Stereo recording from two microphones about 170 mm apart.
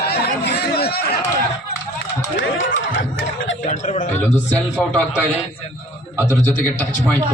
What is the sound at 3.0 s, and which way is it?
Speech, 90° left.